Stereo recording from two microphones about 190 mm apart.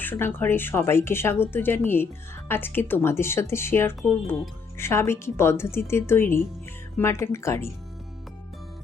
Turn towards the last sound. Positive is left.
turn(degrees=15)  # may be behind; listen again after turning